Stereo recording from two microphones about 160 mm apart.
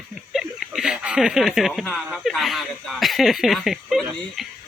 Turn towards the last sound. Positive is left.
turn(degrees=0)  # may be behind; listen again after turning